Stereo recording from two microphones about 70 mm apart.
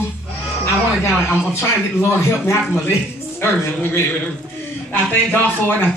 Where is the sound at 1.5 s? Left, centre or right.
Left.